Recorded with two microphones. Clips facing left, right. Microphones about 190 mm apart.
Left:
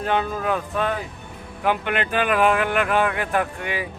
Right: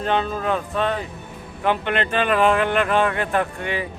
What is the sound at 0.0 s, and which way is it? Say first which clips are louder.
A man's voice: right 1 dB; 5° left (ahead or behind).